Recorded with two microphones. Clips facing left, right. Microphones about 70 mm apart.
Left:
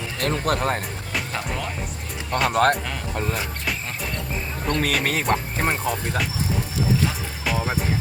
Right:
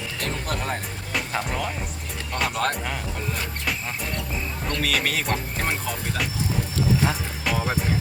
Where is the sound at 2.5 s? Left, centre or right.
Left.